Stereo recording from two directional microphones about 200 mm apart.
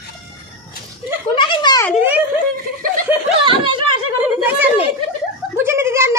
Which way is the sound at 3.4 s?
25° right (ahead or behind).